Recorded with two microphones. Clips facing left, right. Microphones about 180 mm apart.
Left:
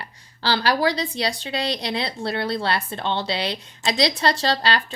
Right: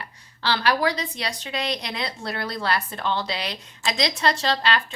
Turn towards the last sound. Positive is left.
turn(degrees=35)  # may be behind; listen again after turning